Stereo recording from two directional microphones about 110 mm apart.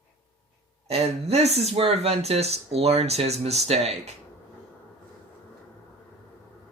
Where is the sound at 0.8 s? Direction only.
70° right (ahead or behind).